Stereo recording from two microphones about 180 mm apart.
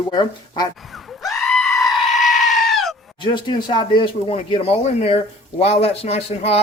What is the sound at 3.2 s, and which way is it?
Speech, 25° left (ahead or behind).